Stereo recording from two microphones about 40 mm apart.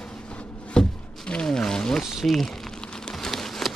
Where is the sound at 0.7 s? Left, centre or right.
Left.